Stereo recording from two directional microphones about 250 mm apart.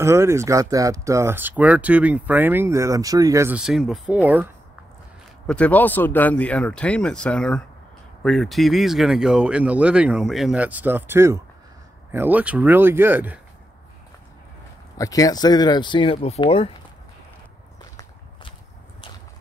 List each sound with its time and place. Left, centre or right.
0.0 s speech: centre
5.5 s speech: centre
15.0 s speech: centre